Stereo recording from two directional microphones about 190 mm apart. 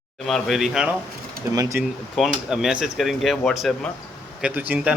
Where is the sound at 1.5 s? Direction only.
20° right (ahead or behind).